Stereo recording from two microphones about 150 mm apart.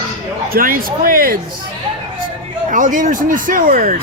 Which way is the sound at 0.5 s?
70° right (ahead or behind).